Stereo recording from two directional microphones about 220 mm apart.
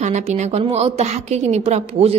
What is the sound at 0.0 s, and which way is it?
A woman's voice, 30° right (ahead or behind).